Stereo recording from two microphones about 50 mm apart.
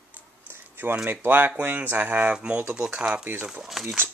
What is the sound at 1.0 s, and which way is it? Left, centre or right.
Speech, right.